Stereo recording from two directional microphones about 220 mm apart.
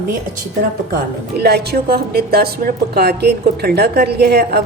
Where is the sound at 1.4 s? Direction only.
45° right (ahead or behind).